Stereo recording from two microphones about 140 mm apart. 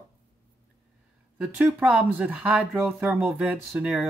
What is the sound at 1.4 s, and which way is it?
Speech, 10° right (ahead or behind).